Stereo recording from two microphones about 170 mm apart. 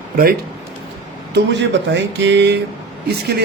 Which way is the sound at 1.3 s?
90° right.